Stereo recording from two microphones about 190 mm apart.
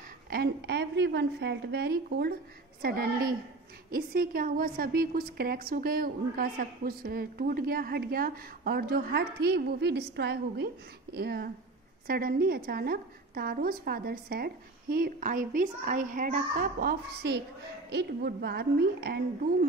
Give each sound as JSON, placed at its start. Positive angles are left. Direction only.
{"t": 0.3, "sound": "a woman's voice", "side_deg": -60}